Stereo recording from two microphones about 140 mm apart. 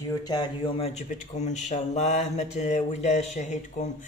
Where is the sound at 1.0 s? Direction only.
60° left (ahead or behind).